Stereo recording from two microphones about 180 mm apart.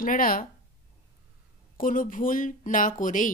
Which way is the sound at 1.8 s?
50° left (ahead or behind).